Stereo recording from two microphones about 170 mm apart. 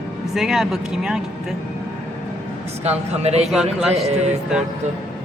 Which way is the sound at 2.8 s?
40° right (ahead or behind).